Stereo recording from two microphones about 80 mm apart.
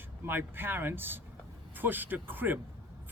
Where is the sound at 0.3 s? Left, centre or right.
Right.